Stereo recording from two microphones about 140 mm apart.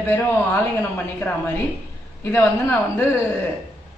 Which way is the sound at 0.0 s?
15° left (ahead or behind).